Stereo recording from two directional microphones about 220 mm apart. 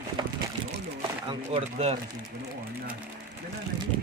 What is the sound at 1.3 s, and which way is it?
Speech, 25° right (ahead or behind).